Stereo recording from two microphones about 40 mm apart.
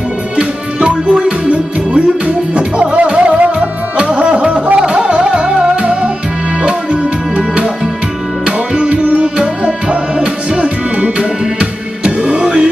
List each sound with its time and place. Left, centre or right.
0.4 s music: right